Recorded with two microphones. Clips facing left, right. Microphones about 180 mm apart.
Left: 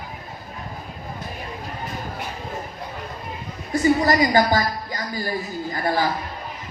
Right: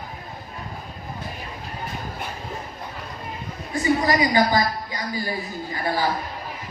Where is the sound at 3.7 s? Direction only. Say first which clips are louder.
Left 7 dB; 40° left (ahead or behind).